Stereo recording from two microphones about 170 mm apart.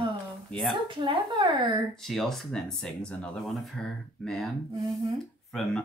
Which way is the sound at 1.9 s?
Centre (ahead or behind).